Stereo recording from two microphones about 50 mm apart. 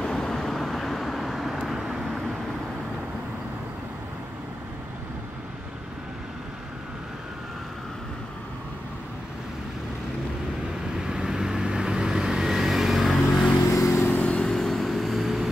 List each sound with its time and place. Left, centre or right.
0.0 s vehicle: centre
11.0 s vehicle: centre
13.6 s vehicle: left
14.1 s vehicle: left
14.5 s vehicle: centre